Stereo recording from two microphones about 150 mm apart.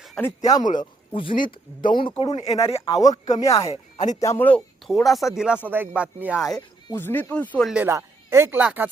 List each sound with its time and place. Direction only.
0.2 s speech: 20° left (ahead or behind)
0.8 s speech: 35° left (ahead or behind)
2.4 s speech: 40° left (ahead or behind)
3.0 s speech: 25° left (ahead or behind)
3.9 s speech: 55° left (ahead or behind)
4.2 s speech: 15° left (ahead or behind); by 6.6 s 5° right (ahead or behind)
6.9 s speech: 15° left (ahead or behind)
7.9 s speech: 15° right (ahead or behind)